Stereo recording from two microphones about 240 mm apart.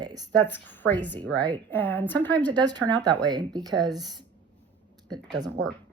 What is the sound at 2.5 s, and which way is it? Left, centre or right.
A woman's voice, centre.